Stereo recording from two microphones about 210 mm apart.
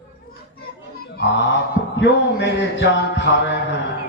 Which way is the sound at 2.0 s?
55° left (ahead or behind).